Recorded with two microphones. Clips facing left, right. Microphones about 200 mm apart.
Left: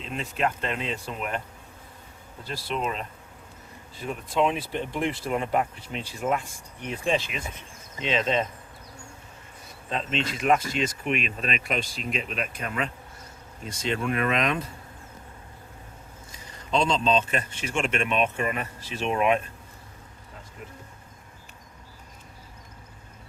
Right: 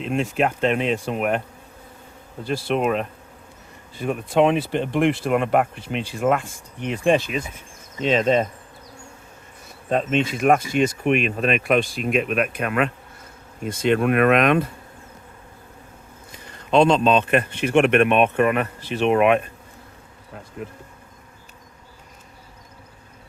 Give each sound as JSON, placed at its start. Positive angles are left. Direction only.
{"t": 0.0, "sound": "speech", "side_deg": -70}
{"t": 2.5, "sound": "a man's voice", "side_deg": -65}
{"t": 6.8, "sound": "speech", "side_deg": -70}
{"t": 7.2, "sound": "speech", "side_deg": -40}
{"t": 9.9, "sound": "a man's voice", "side_deg": -50}
{"t": 16.3, "sound": "a man's voice", "side_deg": -60}